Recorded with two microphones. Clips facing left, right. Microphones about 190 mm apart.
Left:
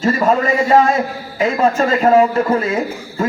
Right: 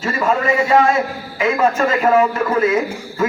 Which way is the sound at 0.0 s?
35° left (ahead or behind).